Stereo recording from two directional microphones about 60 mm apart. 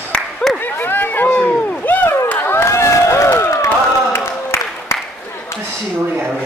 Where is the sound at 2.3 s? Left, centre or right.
Left.